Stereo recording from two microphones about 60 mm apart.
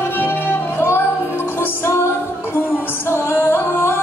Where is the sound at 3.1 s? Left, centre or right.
Left.